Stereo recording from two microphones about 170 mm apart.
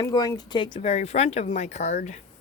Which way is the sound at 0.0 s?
20° left (ahead or behind).